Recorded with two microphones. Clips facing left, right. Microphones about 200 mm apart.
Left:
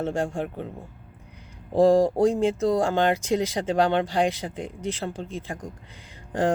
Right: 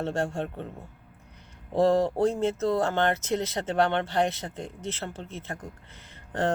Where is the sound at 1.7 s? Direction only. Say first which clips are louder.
Left 4 dB; 10° left (ahead or behind).